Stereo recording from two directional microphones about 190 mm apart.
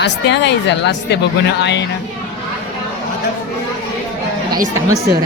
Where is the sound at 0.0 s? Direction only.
65° left (ahead or behind).